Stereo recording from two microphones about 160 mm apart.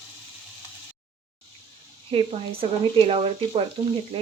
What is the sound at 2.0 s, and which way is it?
Speech, 35° right (ahead or behind).